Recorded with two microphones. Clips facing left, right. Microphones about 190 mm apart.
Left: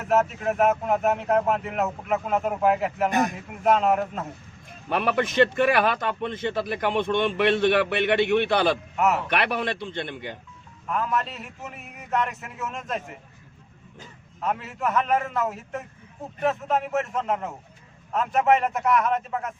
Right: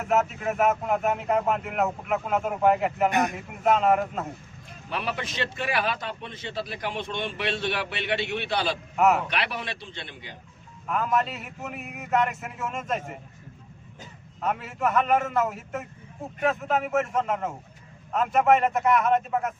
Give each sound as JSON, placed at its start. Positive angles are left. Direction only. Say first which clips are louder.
{"t": 0.1, "sound": "speech", "louder": "left 3 dB", "side_deg": 0}
{"t": 4.9, "sound": "a man's voice", "louder": "left 7 dB", "side_deg": 55}
{"t": 9.0, "sound": "speech", "louder": "right 4 dB", "side_deg": 0}
{"t": 9.3, "sound": "a man's voice", "louder": "left 6 dB", "side_deg": 55}
{"t": 10.8, "sound": "speech", "louder": "right 1 dB", "side_deg": 0}
{"t": 14.4, "sound": "speech", "louder": "even", "side_deg": 0}